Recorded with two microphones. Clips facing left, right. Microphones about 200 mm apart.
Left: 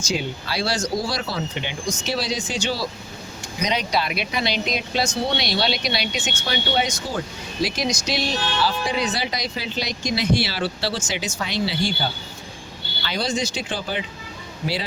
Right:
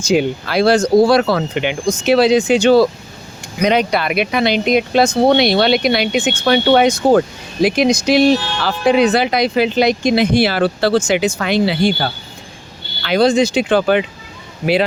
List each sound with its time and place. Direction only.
0.0 s speech: 55° right (ahead or behind)